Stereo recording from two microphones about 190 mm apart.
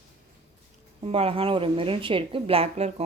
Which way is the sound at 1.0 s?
30° right (ahead or behind).